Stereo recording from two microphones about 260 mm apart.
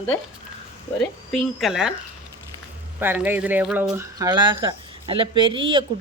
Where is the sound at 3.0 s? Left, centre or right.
Centre.